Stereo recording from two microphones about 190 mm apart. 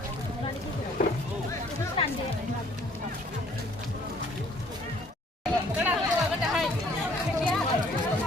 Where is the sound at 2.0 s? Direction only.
30° left (ahead or behind).